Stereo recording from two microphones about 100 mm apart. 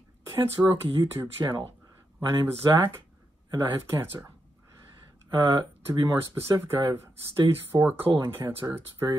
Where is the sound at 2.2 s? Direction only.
25° right (ahead or behind).